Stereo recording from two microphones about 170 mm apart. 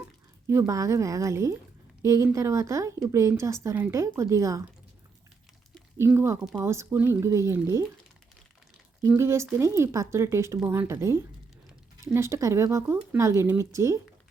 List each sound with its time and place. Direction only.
0.4 s speech: 15° right (ahead or behind)
6.0 s speech: 15° right (ahead or behind)
9.0 s speech: 15° right (ahead or behind)